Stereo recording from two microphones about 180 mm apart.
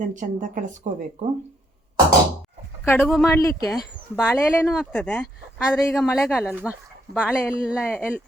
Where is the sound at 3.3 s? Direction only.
15° left (ahead or behind); by 6.7 s 5° right (ahead or behind).